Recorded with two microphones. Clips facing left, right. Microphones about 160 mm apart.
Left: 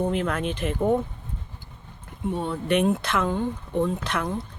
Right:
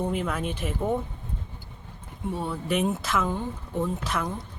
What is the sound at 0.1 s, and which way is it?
Speech, 5° right (ahead or behind).